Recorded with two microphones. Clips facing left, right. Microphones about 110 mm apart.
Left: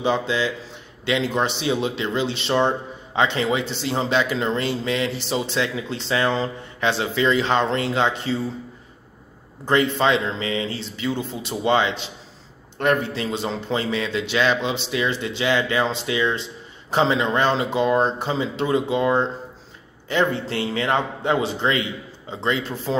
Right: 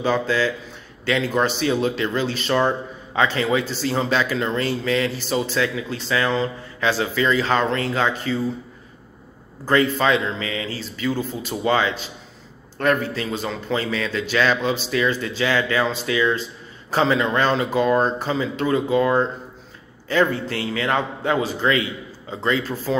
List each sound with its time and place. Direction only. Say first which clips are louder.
0.0 s speech: right 1 dB; 20° left (ahead or behind)
9.7 s speech: right 1 dB; 25° left (ahead or behind)